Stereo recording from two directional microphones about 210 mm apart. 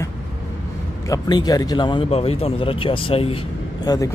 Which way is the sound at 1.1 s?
20° left (ahead or behind).